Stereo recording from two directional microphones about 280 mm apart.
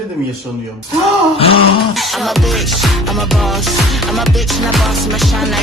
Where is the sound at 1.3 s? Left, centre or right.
Left.